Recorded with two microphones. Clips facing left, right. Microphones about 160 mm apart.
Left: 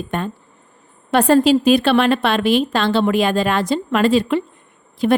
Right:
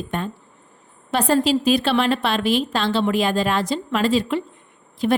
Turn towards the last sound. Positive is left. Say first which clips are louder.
# left 4 dB
turn(degrees=60)  # may be behind; listen again after turning